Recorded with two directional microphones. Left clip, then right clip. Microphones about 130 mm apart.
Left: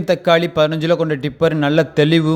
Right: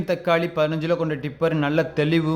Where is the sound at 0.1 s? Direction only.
35° left (ahead or behind).